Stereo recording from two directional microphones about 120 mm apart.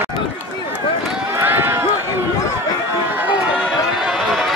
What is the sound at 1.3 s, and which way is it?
Run, 15° right (ahead or behind).